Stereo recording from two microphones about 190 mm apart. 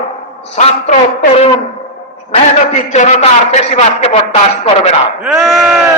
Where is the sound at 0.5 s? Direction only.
35° left (ahead or behind).